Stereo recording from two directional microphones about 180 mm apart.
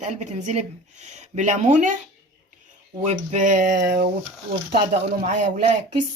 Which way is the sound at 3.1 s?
40° right (ahead or behind).